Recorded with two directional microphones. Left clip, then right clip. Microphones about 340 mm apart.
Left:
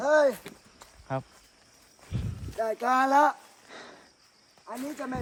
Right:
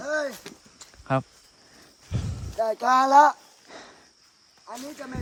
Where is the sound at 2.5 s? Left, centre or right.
Centre.